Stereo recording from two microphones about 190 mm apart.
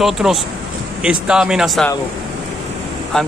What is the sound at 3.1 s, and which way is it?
Speech, 5° left (ahead or behind).